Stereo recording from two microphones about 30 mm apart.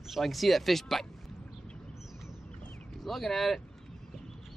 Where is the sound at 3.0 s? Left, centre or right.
Centre.